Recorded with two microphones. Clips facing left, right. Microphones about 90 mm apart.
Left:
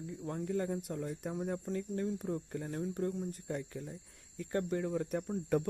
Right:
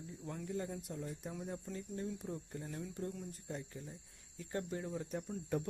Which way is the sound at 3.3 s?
65° left (ahead or behind).